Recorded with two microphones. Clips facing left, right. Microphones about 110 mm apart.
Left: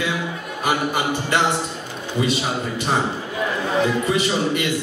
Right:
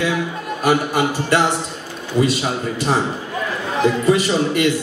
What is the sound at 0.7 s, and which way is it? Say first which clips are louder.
Speech: right 4 dB; 35° right (ahead or behind).